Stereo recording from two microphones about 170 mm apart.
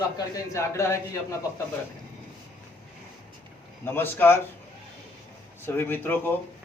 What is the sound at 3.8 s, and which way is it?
Speech, 10° left (ahead or behind).